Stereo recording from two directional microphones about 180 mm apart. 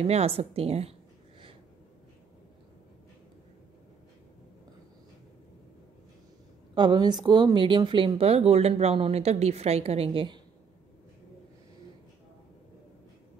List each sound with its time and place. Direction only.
0.0 s speech: 35° right (ahead or behind)
6.7 s speech: 25° right (ahead or behind)